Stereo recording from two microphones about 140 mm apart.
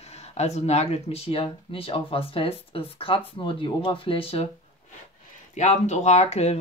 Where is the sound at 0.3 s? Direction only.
50° left (ahead or behind).